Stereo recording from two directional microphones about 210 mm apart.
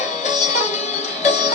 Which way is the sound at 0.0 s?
35° left (ahead or behind).